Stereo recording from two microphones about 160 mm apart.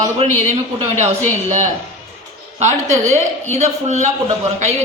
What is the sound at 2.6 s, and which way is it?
A woman's voice, 50° right (ahead or behind).